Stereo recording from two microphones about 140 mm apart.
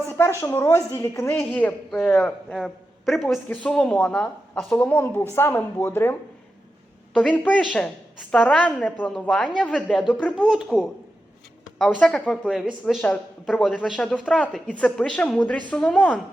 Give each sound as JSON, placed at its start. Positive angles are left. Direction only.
{"t": 0.1, "sound": "a woman's voice", "side_deg": 20}
{"t": 10.3, "sound": "speech", "side_deg": 0}
{"t": 11.9, "sound": "speech", "side_deg": 5}